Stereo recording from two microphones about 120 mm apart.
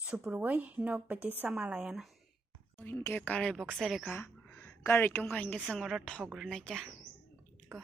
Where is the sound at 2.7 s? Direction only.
15° left (ahead or behind).